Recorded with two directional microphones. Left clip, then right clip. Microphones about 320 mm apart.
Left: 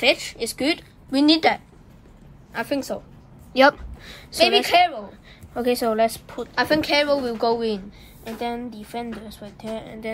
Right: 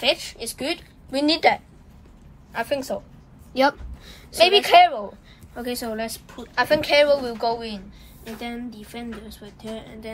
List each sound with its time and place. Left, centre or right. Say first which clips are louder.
0.0 s a woman's voice: left 3 dB; left
1.1 s a woman's voice: left 1 dB; centre
3.5 s a sound: left 4 dB; left
4.4 s a woman's voice: right 3 dB; centre
5.6 s a woman's voice: left 9 dB; left
6.5 s a woman's voice: right 1 dB; centre
8.5 s a woman's voice: left 5 dB; left